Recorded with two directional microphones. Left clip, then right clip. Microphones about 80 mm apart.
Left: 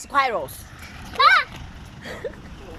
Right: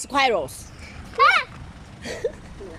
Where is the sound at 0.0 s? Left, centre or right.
Right.